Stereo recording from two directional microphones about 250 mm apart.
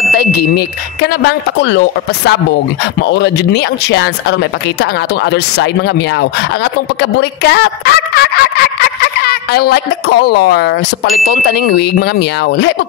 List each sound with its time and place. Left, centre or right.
0.2 s speech: left